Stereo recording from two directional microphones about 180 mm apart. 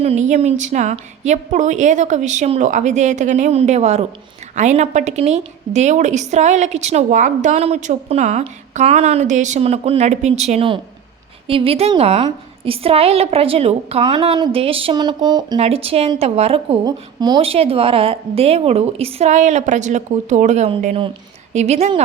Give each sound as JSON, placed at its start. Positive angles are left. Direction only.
{"t": 0.0, "sound": "a woman's voice", "side_deg": -40}
{"t": 15.5, "sound": "a woman's voice", "side_deg": -35}
{"t": 16.8, "sound": "a woman's voice", "side_deg": -25}